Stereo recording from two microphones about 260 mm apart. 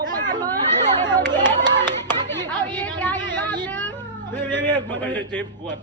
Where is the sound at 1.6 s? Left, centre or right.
Centre.